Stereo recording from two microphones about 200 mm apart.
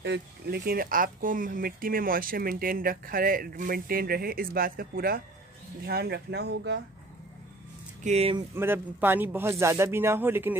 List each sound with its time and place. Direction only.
0.0 s speech: 55° right (ahead or behind)
8.0 s speech: 35° right (ahead or behind)
8.5 s speech: 10° right (ahead or behind)